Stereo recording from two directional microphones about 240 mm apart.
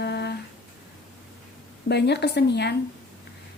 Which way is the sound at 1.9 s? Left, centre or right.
Left.